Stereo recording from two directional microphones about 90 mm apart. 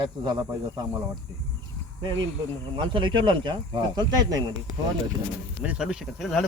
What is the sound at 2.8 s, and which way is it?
Speech, 60° right (ahead or behind).